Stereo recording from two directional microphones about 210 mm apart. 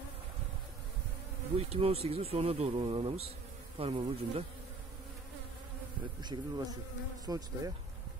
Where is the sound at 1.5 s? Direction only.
30° right (ahead or behind).